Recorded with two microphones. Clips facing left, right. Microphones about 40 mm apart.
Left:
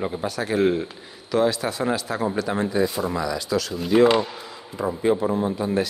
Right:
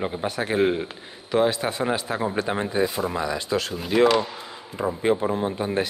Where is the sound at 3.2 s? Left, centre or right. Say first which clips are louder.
Left 1 dB; right.